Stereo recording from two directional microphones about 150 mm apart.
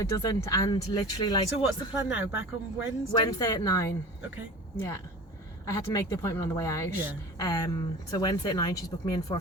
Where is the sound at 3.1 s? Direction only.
25° left (ahead or behind).